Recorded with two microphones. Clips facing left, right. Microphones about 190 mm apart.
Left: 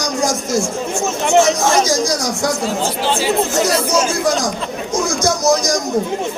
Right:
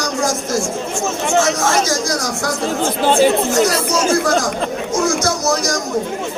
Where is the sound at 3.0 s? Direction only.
50° right (ahead or behind).